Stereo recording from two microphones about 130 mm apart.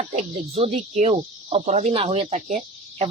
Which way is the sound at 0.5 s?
50° right (ahead or behind).